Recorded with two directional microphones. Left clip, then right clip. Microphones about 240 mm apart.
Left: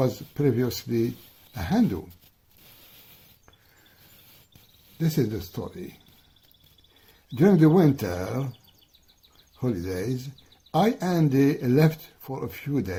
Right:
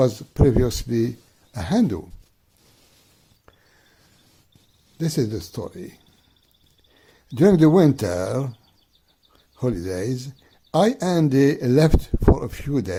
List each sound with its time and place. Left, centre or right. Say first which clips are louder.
0.0 s speech: right 6 dB; right
4.9 s speech: right 3 dB; right
7.3 s speech: right 4 dB; right
9.6 s speech: right 4 dB; right